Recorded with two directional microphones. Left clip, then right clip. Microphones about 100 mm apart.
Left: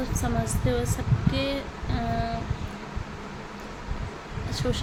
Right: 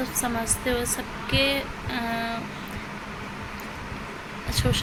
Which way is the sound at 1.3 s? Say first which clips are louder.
Right 7 dB; 20° left (ahead or behind).